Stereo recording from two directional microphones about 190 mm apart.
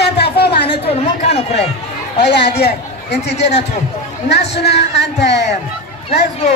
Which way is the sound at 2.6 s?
60° left (ahead or behind).